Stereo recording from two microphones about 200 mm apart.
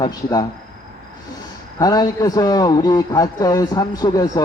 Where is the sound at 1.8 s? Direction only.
20° left (ahead or behind).